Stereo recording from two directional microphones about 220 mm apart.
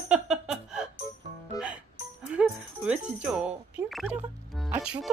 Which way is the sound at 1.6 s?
15° left (ahead or behind).